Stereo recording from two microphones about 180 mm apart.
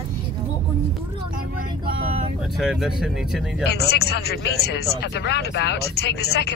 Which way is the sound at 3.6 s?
65° left (ahead or behind).